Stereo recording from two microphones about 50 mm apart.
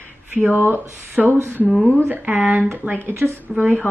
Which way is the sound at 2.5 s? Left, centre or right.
Right.